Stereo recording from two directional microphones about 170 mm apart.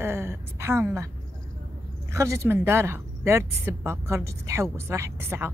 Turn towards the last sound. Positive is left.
turn(degrees=-15)  # may be behind; listen again after turning